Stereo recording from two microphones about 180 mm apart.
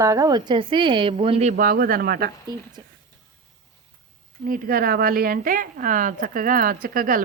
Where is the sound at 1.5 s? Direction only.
50° right (ahead or behind).